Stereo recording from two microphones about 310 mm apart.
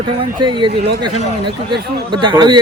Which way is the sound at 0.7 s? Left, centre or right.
Right.